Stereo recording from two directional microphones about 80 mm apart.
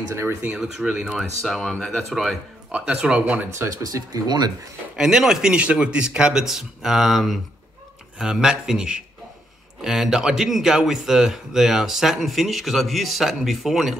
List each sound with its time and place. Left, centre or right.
0.6 s a man's voice: centre
2.7 s a man's voice: centre
3.8 s speech: right
4.9 s a man's voice: centre